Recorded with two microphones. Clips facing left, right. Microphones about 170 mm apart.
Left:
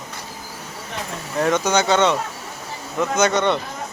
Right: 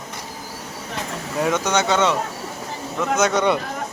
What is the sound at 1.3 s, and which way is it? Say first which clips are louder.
Speech: left 2 dB; 5° right (ahead or behind).